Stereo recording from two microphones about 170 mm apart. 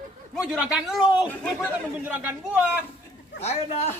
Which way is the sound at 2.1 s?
10° right (ahead or behind).